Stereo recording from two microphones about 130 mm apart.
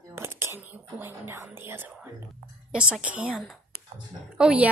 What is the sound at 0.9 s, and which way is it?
Whispering, 15° right (ahead or behind).